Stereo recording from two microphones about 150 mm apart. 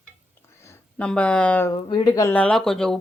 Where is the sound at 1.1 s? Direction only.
5° left (ahead or behind).